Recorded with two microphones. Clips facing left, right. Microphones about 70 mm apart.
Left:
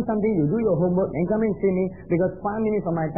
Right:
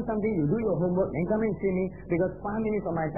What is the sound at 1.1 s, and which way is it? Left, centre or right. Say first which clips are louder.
Speech: left 4 dB; centre.